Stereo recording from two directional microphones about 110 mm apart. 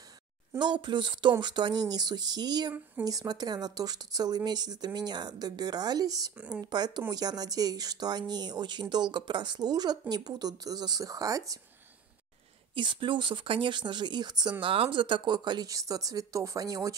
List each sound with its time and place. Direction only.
0.7 s speech: 45° right (ahead or behind)
6.3 s speech: 10° right (ahead or behind)
6.6 s speech: 40° right (ahead or behind)
12.7 s speech: 50° right (ahead or behind)
14.6 s speech: 55° right (ahead or behind); by 16.9 s 35° right (ahead or behind)